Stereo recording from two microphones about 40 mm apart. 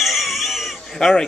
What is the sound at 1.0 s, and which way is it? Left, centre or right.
Speech, centre.